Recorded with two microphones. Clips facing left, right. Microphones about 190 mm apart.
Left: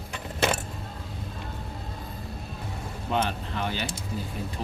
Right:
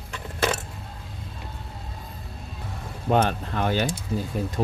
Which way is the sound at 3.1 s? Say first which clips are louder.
Right 6 dB; 50° right (ahead or behind).